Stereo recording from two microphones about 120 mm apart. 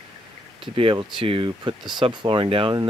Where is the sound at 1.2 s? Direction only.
45° right (ahead or behind).